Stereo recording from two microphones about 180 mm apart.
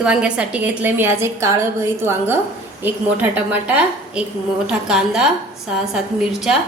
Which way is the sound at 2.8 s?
10° right (ahead or behind).